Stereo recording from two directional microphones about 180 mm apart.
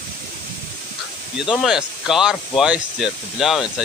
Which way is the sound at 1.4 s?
Centre (ahead or behind).